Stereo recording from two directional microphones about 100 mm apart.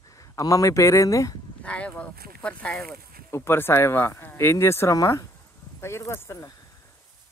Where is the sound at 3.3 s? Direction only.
25° left (ahead or behind).